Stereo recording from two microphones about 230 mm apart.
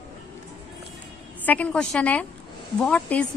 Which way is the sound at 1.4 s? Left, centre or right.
Centre.